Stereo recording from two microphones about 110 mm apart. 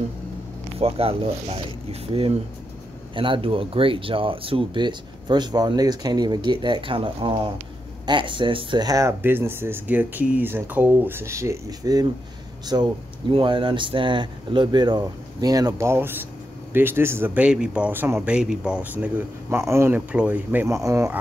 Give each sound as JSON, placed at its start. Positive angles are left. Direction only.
{"t": 0.7, "sound": "speech", "side_deg": -65}
{"t": 3.2, "sound": "speech", "side_deg": -55}
{"t": 8.8, "sound": "speech", "side_deg": -30}
{"t": 9.2, "sound": "speech", "side_deg": -20}
{"t": 13.3, "sound": "speech", "side_deg": -50}
{"t": 19.6, "sound": "speech", "side_deg": -25}
{"t": 20.1, "sound": "speech", "side_deg": -15}
{"t": 20.6, "sound": "speech", "side_deg": -25}